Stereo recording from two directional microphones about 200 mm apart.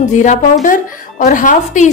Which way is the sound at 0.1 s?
35° left (ahead or behind).